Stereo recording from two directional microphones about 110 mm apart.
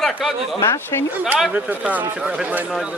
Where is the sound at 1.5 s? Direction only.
15° right (ahead or behind).